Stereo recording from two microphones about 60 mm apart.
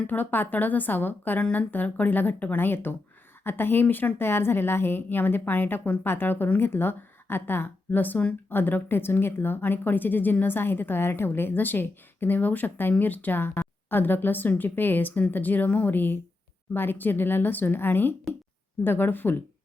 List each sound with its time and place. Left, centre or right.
0.1 s a woman's voice: left